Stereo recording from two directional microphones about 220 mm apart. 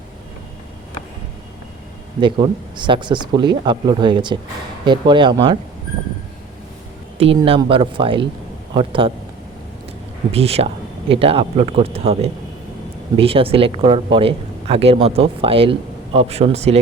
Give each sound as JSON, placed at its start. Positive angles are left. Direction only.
{"t": 2.2, "sound": "speech", "side_deg": -20}
{"t": 7.2, "sound": "speech", "side_deg": -25}
{"t": 10.3, "sound": "speech", "side_deg": -25}